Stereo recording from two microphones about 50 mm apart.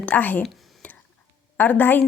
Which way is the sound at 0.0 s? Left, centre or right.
Left.